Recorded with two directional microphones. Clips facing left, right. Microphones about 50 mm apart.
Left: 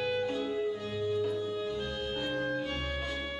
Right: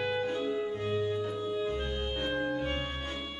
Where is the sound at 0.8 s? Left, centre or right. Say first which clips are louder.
Right 1 dB; right.